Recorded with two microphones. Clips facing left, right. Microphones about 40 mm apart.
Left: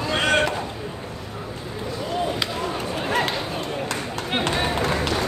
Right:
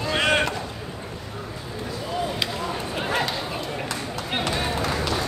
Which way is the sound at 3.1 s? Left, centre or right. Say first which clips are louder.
Left 2 dB; left.